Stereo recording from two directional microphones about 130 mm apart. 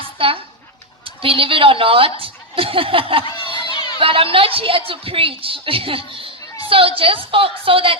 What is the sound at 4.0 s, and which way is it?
A woman's voice, 45° right (ahead or behind).